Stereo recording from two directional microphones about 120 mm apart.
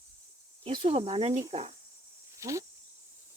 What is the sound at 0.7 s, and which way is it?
Speech, 55° right (ahead or behind).